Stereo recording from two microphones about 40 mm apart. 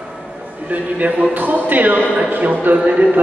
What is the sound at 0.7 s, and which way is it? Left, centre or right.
A man's voice, right.